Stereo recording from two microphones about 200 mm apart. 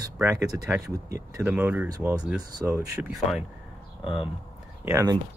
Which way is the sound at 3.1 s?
Centre (ahead or behind).